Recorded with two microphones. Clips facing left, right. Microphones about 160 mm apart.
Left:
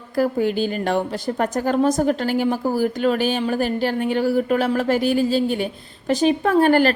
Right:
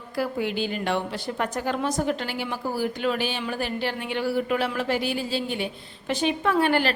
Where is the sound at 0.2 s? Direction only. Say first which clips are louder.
Left 7 dB; 45° left (ahead or behind).